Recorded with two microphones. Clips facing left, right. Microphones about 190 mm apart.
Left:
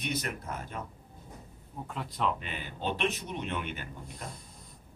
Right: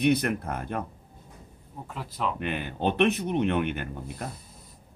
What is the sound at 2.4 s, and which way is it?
Speech, 60° right (ahead or behind).